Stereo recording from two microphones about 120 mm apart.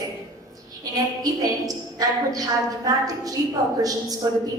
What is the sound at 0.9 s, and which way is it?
A woman's voice, 30° right (ahead or behind).